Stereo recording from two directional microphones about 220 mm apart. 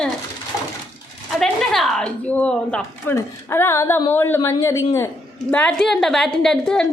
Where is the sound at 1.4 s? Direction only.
Centre (ahead or behind).